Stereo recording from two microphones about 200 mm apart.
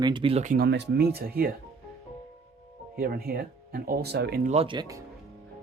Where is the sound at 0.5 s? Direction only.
55° right (ahead or behind).